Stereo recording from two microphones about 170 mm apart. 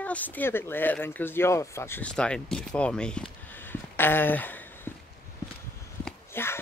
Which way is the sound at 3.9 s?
10° left (ahead or behind).